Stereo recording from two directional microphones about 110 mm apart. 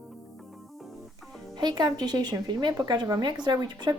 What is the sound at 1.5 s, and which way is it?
Speech, 40° right (ahead or behind).